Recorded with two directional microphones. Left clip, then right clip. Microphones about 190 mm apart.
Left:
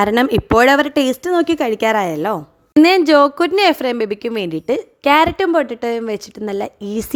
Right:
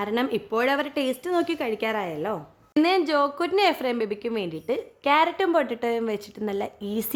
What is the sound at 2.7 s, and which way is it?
A woman's voice, 40° left (ahead or behind).